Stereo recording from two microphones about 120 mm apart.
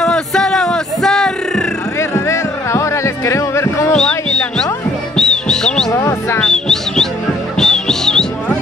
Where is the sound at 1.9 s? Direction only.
25° left (ahead or behind).